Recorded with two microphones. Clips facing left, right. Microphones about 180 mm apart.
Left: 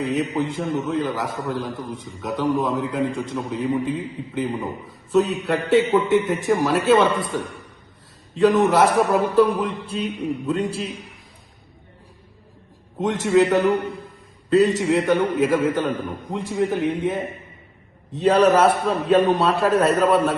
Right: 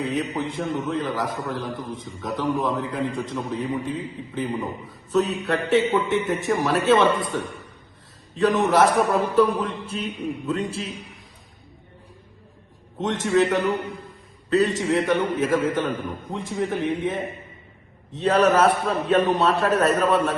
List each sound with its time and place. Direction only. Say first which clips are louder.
0.0 s a man's voice: left 3 dB; centre (ahead or behind)
8.5 s a man's voice: left 2 dB; centre (ahead or behind)
13.0 s a man's voice: left 3 dB; centre (ahead or behind)